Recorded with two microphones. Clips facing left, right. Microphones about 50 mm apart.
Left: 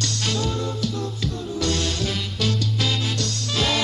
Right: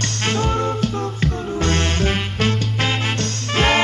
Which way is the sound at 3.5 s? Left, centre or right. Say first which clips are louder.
Right 7 dB; right.